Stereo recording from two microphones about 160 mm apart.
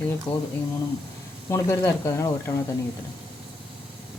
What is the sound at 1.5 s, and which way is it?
Speech, 20° left (ahead or behind).